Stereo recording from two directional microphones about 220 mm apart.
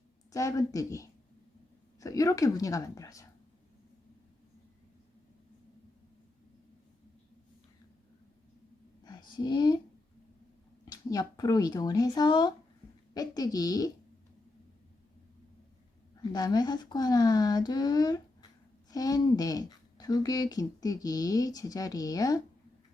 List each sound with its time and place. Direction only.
0.3 s speech: 15° left (ahead or behind)
9.0 s a sound: 20° left (ahead or behind)
10.8 s speech: 15° left (ahead or behind)
16.3 s speech: 20° left (ahead or behind)